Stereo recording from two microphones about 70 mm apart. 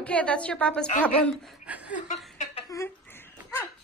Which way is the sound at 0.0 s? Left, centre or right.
Centre.